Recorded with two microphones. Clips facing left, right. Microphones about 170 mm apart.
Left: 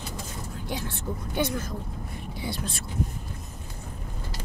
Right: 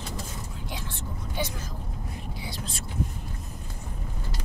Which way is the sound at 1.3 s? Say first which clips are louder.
Left 5 dB; 55° left (ahead or behind).